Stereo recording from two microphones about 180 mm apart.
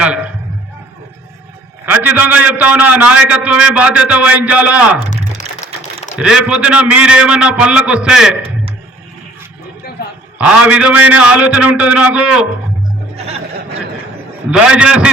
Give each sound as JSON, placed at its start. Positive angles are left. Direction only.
{"t": 1.9, "sound": "a man's voice", "side_deg": -10}
{"t": 6.1, "sound": "a man's voice", "side_deg": -5}
{"t": 10.3, "sound": "a man's voice", "side_deg": -5}
{"t": 13.1, "sound": "music", "side_deg": -35}
{"t": 14.5, "sound": "a man's voice", "side_deg": -5}